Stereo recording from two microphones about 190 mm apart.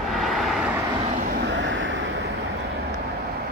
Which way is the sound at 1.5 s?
80° right.